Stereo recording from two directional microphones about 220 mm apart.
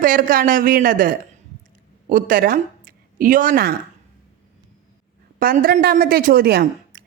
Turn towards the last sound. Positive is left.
turn(degrees=-45)  # may be behind; listen again after turning